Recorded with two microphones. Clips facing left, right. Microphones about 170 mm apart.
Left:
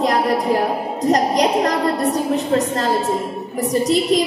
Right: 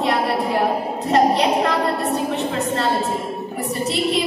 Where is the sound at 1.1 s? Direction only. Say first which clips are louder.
Even; 40° left (ahead or behind).